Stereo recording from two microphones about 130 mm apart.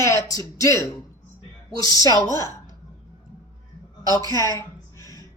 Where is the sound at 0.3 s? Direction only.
25° left (ahead or behind).